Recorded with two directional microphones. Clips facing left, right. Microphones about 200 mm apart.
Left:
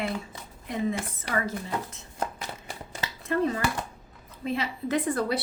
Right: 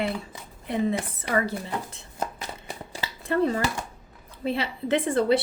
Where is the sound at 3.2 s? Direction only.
35° right (ahead or behind).